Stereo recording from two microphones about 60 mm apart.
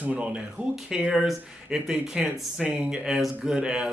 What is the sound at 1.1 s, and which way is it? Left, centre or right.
Speech, centre.